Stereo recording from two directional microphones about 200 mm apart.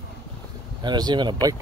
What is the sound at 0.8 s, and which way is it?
Speech, 20° right (ahead or behind).